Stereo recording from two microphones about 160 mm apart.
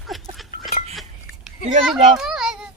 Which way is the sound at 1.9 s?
Centre (ahead or behind).